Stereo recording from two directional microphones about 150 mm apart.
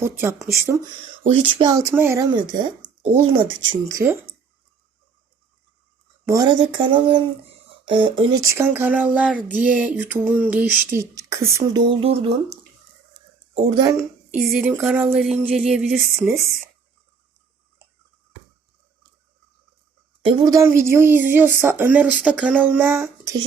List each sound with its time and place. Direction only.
0.0 s female singing: 15° right (ahead or behind)
1.3 s speech: 35° right (ahead or behind); by 2.2 s 15° right (ahead or behind)
2.3 s speech: 30° right (ahead or behind); by 4.4 s 15° right (ahead or behind)
6.2 s speech: 25° right (ahead or behind)
8.4 s speech: 20° right (ahead or behind)
8.6 s female singing: 10° right (ahead or behind)
11.0 s speech: 20° right (ahead or behind); by 12.4 s 40° right (ahead or behind)
13.5 s speech: 40° right (ahead or behind)
14.3 s speech: 5° right (ahead or behind)
20.2 s speech: 35° right (ahead or behind)
20.5 s female singing: 20° right (ahead or behind)